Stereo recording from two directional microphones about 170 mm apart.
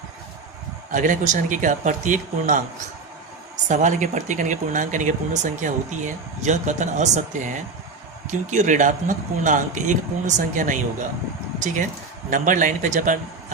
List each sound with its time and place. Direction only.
0.9 s speech: 50° right (ahead or behind)
3.7 s speech: 45° right (ahead or behind)
12.3 s speech: 50° right (ahead or behind)